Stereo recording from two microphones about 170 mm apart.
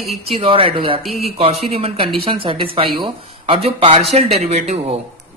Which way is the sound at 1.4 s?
35° right (ahead or behind).